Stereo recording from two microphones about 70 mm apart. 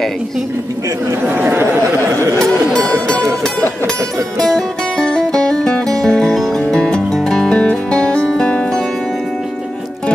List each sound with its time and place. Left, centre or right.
1.2 s chatter: right
4.4 s music: centre